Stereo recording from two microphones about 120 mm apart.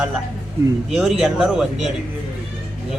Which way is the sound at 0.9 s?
5° right (ahead or behind).